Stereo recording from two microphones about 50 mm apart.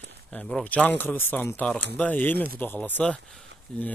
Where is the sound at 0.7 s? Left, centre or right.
Left.